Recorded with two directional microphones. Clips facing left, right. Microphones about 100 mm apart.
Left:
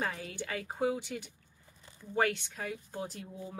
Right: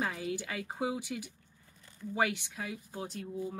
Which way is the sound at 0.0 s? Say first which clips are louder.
Right 2 dB; 5° right (ahead or behind).